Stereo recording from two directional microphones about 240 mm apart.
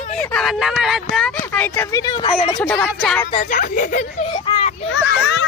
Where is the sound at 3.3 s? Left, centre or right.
Left.